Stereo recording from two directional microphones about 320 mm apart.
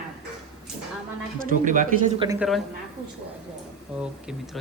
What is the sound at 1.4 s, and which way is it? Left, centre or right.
Speech, right.